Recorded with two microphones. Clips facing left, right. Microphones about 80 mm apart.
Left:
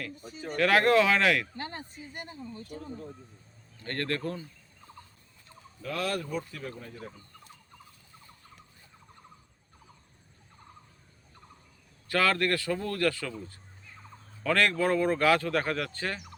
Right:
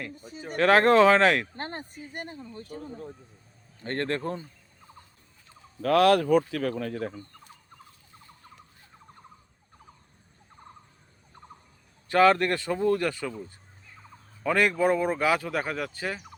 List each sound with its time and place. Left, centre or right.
0.5 s speech: right
3.8 s speech: right
5.8 s speech: right
12.0 s speech: right